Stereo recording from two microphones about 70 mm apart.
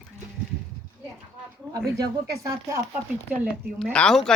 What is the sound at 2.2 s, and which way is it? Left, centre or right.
Speech, right.